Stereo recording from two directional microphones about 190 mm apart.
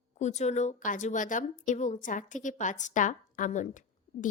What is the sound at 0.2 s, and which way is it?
A woman's voice, 35° left (ahead or behind).